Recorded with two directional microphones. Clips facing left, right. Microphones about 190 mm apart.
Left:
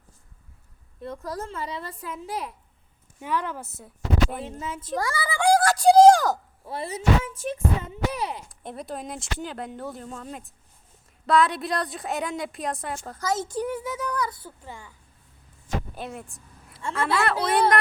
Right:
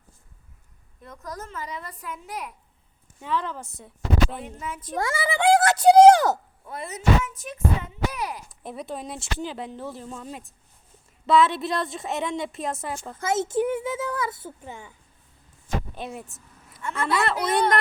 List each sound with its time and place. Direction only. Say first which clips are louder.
1.0 s a woman's voice: left 5 dB; 30° left (ahead or behind)
3.2 s a woman's voice: even; 10° left (ahead or behind)
4.4 s a woman's voice: left 2 dB; 25° left (ahead or behind)
4.9 s speech: right 2 dB; 20° right (ahead or behind)
6.7 s a woman's voice: even; 30° left (ahead or behind)
8.4 s speech: right 1 dB; centre (ahead or behind)
13.1 s a child's voice: right 4 dB; 25° right (ahead or behind)
16.0 s speech: right 1 dB; centre (ahead or behind)
16.7 s a woman's voice: even; 30° left (ahead or behind)
17.5 s speech: left 1 dB; 5° left (ahead or behind)